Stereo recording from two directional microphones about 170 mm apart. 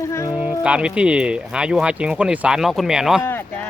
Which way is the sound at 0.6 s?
5° right (ahead or behind).